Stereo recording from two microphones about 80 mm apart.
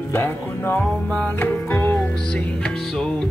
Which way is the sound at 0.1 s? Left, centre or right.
Left.